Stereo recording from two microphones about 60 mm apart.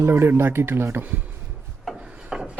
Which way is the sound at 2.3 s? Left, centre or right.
Centre.